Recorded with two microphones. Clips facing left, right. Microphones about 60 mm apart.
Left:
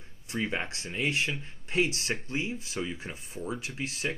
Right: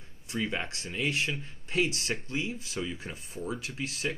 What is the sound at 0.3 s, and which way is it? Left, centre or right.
Speech, left.